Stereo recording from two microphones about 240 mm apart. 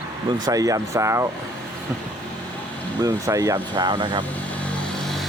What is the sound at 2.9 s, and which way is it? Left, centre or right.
Speech, centre.